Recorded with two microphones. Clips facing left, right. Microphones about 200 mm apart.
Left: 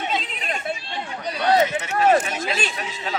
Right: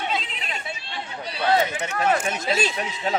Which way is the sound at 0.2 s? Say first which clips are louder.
Left 4 dB; 45° left (ahead or behind).